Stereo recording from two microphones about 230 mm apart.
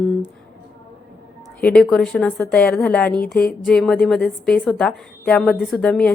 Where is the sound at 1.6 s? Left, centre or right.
Centre.